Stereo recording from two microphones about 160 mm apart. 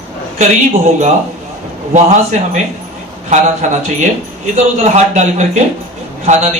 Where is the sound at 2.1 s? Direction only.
50° right (ahead or behind).